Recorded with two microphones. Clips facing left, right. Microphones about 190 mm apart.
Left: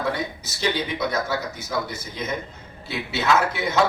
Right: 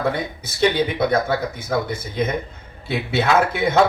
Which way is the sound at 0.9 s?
55° right (ahead or behind).